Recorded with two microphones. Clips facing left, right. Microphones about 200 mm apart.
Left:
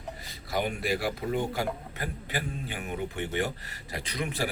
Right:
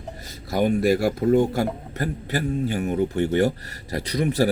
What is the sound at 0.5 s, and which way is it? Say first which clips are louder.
A man's voice: right 10 dB; 45° right (ahead or behind).